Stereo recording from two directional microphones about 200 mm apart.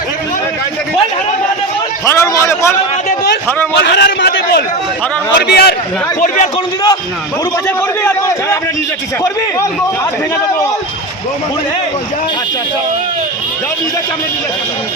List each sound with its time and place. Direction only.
2.0 s a man's voice: 15° left (ahead or behind)
3.8 s a man's voice: 60° left (ahead or behind)
6.1 s a man's voice: 45° left (ahead or behind)
7.8 s a man's voice: 15° left (ahead or behind)